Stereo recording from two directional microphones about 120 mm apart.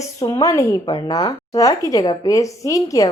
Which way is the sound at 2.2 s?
30° left (ahead or behind).